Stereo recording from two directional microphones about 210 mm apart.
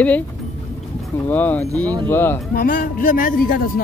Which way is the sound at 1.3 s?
10° left (ahead or behind).